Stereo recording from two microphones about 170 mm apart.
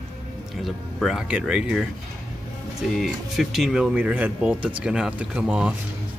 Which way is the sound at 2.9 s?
Centre (ahead or behind).